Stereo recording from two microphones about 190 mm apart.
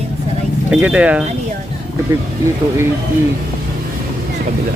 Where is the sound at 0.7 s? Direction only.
5° right (ahead or behind).